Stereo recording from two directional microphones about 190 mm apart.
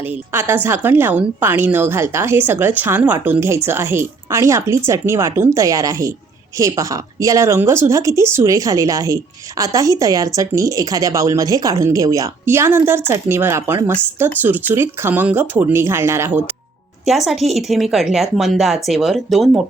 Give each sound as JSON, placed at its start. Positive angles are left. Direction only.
{"t": 0.0, "sound": "a woman's voice", "side_deg": -10}
{"t": 17.1, "sound": "speech", "side_deg": 0}